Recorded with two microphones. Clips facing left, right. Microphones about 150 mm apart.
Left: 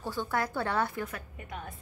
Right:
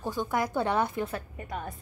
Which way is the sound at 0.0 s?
15° right (ahead or behind).